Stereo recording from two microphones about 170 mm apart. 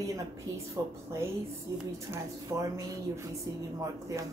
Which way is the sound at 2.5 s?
20° right (ahead or behind).